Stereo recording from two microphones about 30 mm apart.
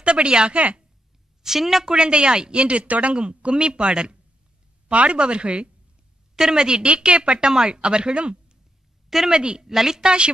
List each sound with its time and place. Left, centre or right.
0.0 s speech: right
1.4 s a woman's voice: centre
1.9 s speech: right
3.2 s speech: right
6.3 s a woman's voice: centre
6.8 s a woman's voice: right
9.7 s a woman's voice: centre
10.0 s speech: right